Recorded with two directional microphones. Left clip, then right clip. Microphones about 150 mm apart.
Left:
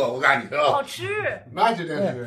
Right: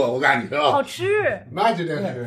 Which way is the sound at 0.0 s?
30° right (ahead or behind).